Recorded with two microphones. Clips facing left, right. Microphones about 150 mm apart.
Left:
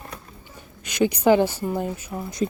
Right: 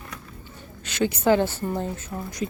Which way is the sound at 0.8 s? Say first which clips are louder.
Left 3 dB; 15° left (ahead or behind).